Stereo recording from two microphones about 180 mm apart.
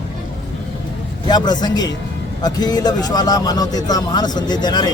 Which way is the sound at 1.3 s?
25° left (ahead or behind).